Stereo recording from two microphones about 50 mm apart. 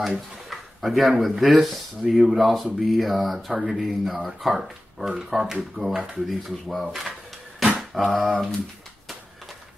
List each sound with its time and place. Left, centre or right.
0.5 s a sound: centre
1.3 s speech: centre
6.2 s speech: centre